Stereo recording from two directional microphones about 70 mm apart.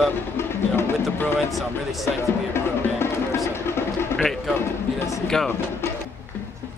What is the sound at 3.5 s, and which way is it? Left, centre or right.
Music, left.